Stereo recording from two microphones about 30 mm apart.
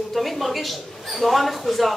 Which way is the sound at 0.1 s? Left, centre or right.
Centre.